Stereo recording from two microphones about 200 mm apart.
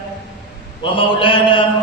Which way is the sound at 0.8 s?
25° left (ahead or behind).